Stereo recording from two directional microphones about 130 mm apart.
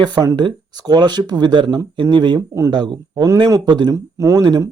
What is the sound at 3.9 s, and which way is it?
Speech, 25° right (ahead or behind).